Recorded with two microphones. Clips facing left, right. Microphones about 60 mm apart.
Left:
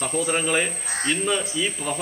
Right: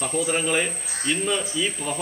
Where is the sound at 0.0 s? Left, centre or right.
Centre.